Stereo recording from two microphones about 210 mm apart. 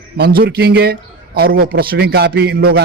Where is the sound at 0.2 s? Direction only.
50° right (ahead or behind).